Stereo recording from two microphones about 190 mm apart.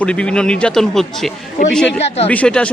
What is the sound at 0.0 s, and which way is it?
Speech, 5° left (ahead or behind).